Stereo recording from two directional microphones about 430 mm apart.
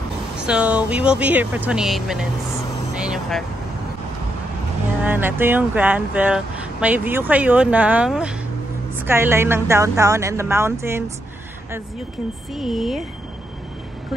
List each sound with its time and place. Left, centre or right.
0.5 s speech: centre
2.9 s vehicle: centre
5.0 s speech: centre
12.5 s speech: centre